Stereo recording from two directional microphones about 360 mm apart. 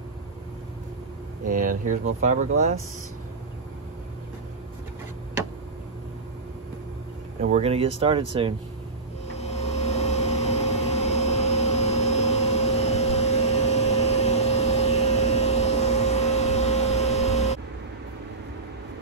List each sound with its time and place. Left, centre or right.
1.5 s speech: right
7.4 s speech: centre
9.4 s vehicle: centre